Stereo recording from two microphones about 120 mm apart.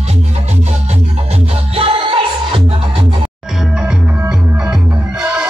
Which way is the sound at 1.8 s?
50° right (ahead or behind).